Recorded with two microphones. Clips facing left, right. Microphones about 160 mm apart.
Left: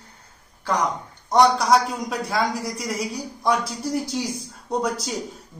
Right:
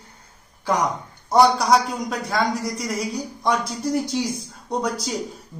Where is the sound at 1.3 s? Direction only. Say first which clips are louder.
Right 1 dB; centre (ahead or behind).